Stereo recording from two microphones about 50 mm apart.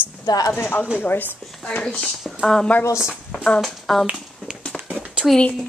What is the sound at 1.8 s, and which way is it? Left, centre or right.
Speech, centre.